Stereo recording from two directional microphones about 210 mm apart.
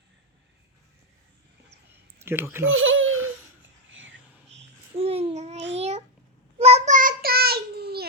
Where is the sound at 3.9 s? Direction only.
65° right (ahead or behind).